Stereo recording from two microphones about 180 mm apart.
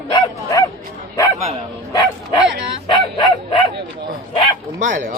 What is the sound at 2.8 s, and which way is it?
Bow-wow, 25° left (ahead or behind).